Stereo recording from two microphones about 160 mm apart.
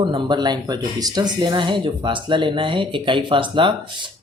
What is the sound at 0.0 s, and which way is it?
Speech, 30° right (ahead or behind).